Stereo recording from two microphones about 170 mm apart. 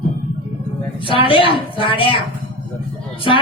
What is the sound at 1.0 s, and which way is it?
A woman's voice, 30° left (ahead or behind).